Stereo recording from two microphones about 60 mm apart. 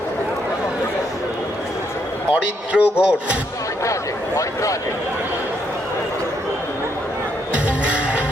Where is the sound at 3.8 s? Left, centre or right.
Left.